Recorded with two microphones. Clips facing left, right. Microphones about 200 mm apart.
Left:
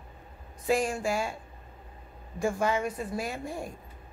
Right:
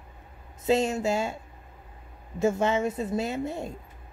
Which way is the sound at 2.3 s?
25° right (ahead or behind).